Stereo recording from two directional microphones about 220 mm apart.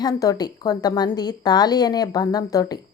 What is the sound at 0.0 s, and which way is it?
A woman's voice, 15° left (ahead or behind).